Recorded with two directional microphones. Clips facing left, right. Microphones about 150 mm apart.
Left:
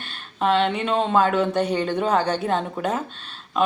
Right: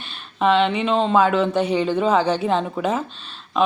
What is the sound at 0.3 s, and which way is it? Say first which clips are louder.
A woman's voice: right 3 dB; centre (ahead or behind).